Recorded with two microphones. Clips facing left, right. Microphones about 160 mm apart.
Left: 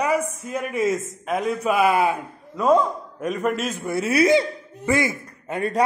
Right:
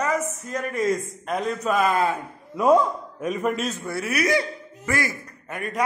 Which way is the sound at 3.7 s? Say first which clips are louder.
Left 6 dB; 20° left (ahead or behind).